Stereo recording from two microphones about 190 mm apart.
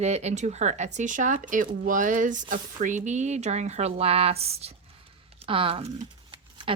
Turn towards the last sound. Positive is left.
turn(degrees=-30)  # may be behind; listen again after turning